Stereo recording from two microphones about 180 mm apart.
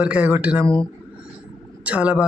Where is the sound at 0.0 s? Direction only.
10° right (ahead or behind).